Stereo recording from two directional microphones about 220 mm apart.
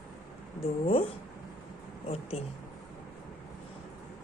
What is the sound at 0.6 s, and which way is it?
Speech, 25° left (ahead or behind).